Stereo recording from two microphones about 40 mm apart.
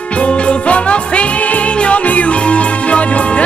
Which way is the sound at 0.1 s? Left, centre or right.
Left.